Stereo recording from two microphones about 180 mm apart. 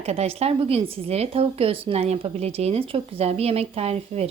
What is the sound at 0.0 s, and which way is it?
A woman's voice, 35° right (ahead or behind).